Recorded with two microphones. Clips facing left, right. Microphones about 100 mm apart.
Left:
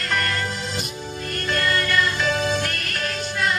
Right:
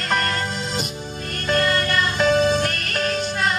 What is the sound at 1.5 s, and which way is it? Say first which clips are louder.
Music: right 3 dB; 30° right (ahead or behind).